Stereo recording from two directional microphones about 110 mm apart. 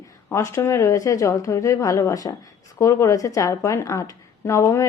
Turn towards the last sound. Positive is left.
turn(degrees=25)  # may be behind; listen again after turning